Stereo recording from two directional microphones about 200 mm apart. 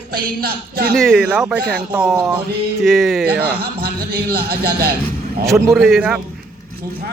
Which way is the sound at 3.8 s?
50° right (ahead or behind).